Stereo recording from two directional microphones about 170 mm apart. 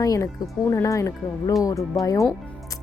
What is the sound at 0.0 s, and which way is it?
Speech, 20° left (ahead or behind).